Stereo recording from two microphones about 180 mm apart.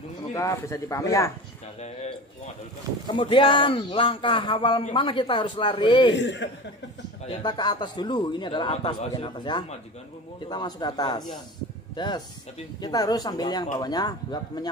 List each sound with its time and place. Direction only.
0.3 s speech: 15° left (ahead or behind)
1.8 s a man's voice: 35° left (ahead or behind)
6.1 s speech: 85° left
7.2 s a man's voice: 25° left (ahead or behind)